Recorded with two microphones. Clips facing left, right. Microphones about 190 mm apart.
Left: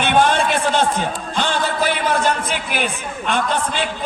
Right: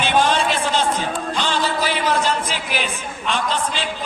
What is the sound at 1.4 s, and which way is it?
Music, 55° left (ahead or behind).